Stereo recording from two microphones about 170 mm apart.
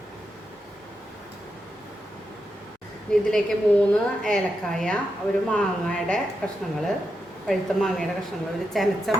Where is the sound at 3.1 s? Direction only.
5° left (ahead or behind).